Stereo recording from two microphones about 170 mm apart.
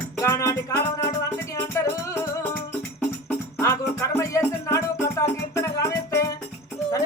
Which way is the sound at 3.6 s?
20° left (ahead or behind).